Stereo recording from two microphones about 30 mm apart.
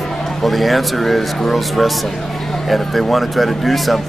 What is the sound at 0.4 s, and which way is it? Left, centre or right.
Speech, centre.